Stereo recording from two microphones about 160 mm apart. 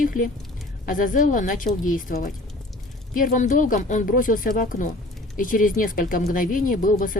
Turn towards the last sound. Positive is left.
turn(degrees=60)  # may be behind; listen again after turning